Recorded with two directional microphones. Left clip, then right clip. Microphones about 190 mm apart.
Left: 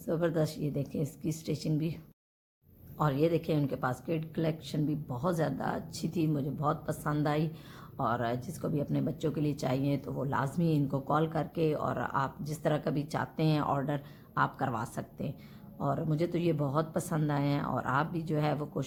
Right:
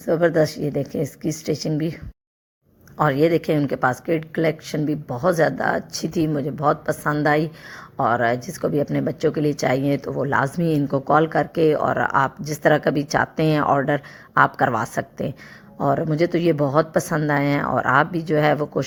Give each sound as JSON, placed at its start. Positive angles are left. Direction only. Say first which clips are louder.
{"t": 0.1, "sound": "speech", "louder": "right 13 dB", "side_deg": -25}
{"t": 0.5, "sound": "speech", "louder": "right 11 dB", "side_deg": -75}
{"t": 0.8, "sound": "speech", "louder": "right 12 dB", "side_deg": -25}
{"t": 3.0, "sound": "a woman's voice", "louder": "right 11 dB", "side_deg": -30}